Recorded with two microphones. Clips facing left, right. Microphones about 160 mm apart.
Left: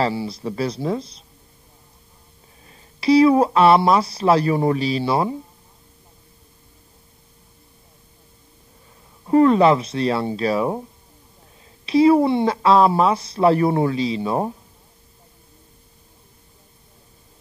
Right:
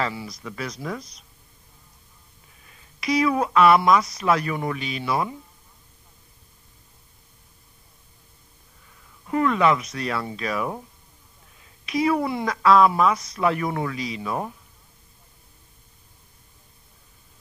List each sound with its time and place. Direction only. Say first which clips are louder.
0.0 s a woman's voice: left 7 dB; 30° left (ahead or behind)
2.6 s speech: left 9 dB; 30° left (ahead or behind)
9.2 s a woman's voice: left 7 dB; 30° left (ahead or behind)